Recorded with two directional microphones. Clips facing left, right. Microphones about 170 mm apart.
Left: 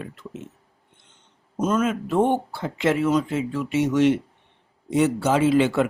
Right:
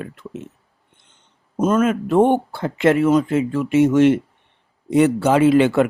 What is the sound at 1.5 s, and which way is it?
Speech, 55° right (ahead or behind).